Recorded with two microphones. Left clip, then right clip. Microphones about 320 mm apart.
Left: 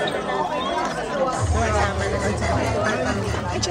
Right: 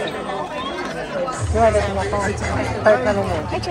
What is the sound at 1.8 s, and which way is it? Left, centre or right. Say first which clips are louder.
Speech: right 2 dB; left.